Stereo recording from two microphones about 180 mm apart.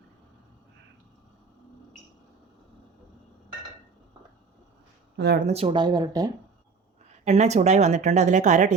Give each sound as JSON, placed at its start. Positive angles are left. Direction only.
{"t": 5.1, "sound": "speech", "side_deg": -65}
{"t": 5.5, "sound": "speech", "side_deg": -30}
{"t": 7.3, "sound": "a woman's voice", "side_deg": -40}